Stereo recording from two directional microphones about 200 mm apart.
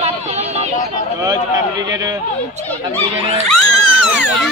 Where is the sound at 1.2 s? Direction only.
20° right (ahead or behind).